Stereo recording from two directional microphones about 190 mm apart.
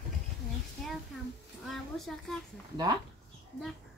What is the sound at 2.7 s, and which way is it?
Speech, 20° right (ahead or behind).